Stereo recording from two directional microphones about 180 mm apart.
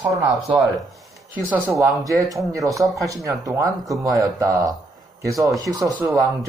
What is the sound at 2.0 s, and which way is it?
Speech, 20° right (ahead or behind).